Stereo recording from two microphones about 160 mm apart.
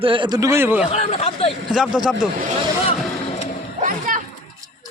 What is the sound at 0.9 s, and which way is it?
Speech, 45° left (ahead or behind).